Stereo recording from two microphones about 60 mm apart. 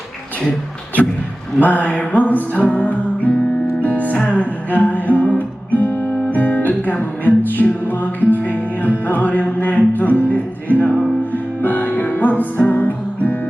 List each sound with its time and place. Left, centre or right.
1.5 s music: left